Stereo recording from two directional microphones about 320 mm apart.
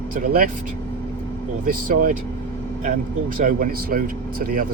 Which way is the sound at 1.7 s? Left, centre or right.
Right.